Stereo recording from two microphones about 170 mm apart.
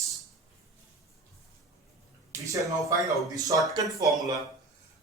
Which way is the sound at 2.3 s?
20° right (ahead or behind).